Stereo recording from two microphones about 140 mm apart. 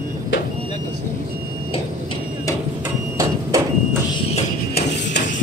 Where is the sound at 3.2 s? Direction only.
25° right (ahead or behind).